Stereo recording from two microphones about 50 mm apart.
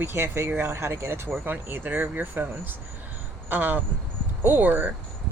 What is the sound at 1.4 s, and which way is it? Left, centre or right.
Speech, right.